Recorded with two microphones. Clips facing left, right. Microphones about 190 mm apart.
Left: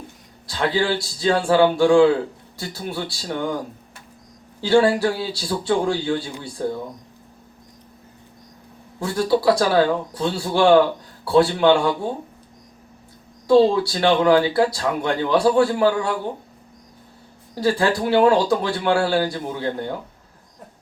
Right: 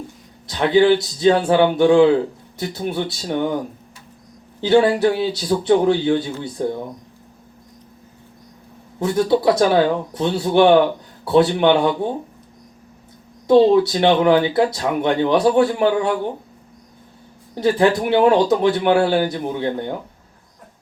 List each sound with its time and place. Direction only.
0.4 s a man's voice: 20° right (ahead or behind)
4.6 s a man's voice: 20° right (ahead or behind)
9.0 s a man's voice: 20° right (ahead or behind)
13.5 s a man's voice: 20° right (ahead or behind)
17.5 s a man's voice: 20° right (ahead or behind)